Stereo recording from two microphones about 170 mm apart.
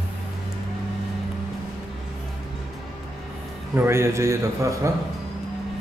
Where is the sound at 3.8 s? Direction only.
15° right (ahead or behind).